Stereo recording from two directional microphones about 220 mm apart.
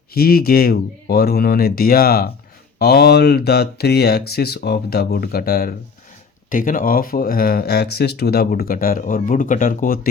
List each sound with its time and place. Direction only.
0.1 s speech: 45° left (ahead or behind)